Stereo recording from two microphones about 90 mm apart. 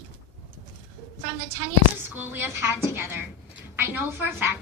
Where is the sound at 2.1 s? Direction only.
25° right (ahead or behind).